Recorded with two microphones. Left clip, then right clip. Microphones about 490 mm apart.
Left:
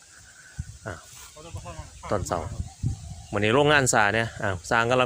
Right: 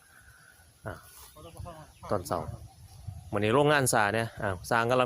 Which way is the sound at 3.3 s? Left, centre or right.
Right.